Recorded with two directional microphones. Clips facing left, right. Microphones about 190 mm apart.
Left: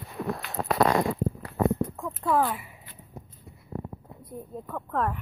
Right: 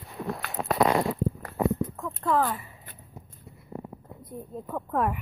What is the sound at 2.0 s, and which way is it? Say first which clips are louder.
Speech: even; 10° left (ahead or behind).